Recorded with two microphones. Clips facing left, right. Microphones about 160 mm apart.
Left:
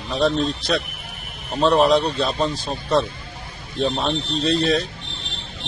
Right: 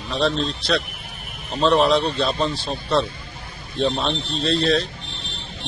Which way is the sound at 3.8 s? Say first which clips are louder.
Even; 5° left (ahead or behind).